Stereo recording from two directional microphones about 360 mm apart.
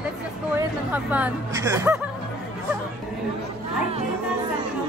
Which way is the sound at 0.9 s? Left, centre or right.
Centre.